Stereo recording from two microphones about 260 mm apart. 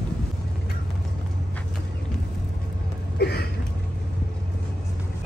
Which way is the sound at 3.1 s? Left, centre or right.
Left.